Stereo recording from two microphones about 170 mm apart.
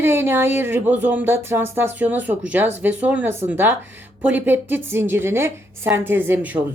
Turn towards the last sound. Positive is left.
turn(degrees=-10)  # may be behind; listen again after turning